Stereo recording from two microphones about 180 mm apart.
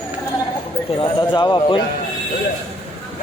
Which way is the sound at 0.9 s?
25° left (ahead or behind).